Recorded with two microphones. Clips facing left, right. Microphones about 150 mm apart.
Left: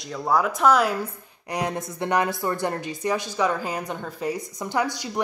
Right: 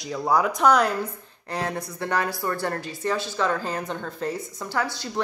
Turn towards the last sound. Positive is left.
turn(degrees=15)  # may be behind; listen again after turning